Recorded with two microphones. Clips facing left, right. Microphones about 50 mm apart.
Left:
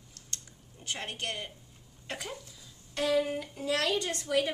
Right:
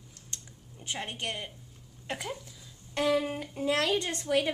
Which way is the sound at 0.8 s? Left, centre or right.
Centre.